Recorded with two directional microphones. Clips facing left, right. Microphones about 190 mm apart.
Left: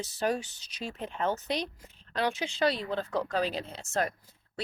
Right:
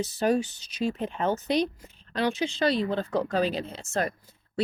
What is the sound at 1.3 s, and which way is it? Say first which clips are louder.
Speech: right 10 dB; 40° right (ahead or behind).